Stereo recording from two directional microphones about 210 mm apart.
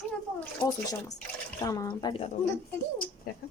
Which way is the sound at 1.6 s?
15° left (ahead or behind).